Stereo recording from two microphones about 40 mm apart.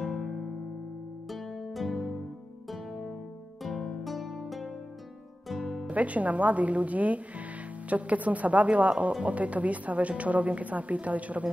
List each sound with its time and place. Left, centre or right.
0.0 s music: centre
1.3 s music: centre
3.6 s music: centre
5.9 s speech: right